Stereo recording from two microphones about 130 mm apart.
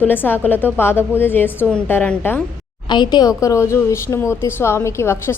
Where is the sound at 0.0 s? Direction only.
15° left (ahead or behind).